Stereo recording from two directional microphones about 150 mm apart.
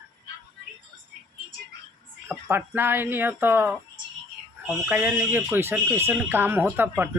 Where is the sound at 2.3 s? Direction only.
15° right (ahead or behind).